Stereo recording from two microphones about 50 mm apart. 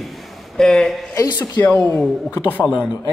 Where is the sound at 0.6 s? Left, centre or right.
Centre.